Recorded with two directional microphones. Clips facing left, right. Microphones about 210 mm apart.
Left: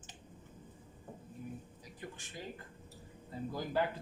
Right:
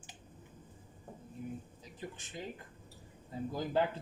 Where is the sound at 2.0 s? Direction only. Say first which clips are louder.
Right 3 dB; 20° right (ahead or behind).